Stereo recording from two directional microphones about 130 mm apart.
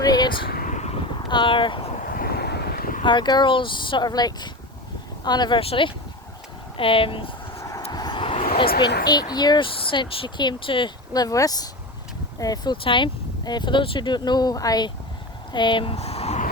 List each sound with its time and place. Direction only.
0.0 s a sound: 30° left (ahead or behind)
0.6 s vehicle: 65° left (ahead or behind)
1.3 s speech: 40° left (ahead or behind)
3.0 s speech: 35° left (ahead or behind)
5.5 s speech: 45° left (ahead or behind)
7.9 s speech: 30° left (ahead or behind)
12.7 s speech: 40° left (ahead or behind)